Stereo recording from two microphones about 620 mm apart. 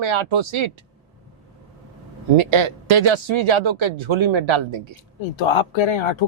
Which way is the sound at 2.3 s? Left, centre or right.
Right.